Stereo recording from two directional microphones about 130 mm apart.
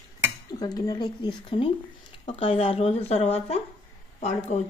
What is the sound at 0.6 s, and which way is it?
Speech, 30° left (ahead or behind).